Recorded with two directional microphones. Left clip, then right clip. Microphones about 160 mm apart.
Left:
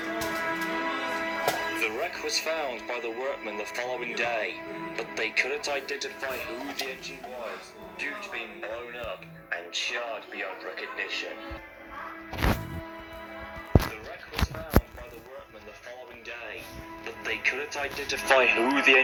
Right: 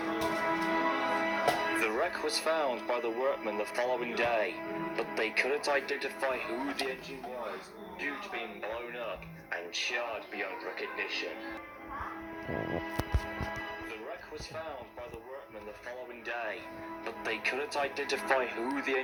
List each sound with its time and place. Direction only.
0.0 s music: 15° right (ahead or behind)
9.5 s speech: 35° right (ahead or behind)
16.3 s music: 55° right (ahead or behind)
17.1 s speech: 15° right (ahead or behind)
18.3 s speech: 25° left (ahead or behind)